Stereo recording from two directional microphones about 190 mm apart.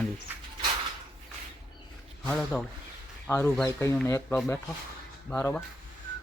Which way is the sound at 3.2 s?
15° left (ahead or behind).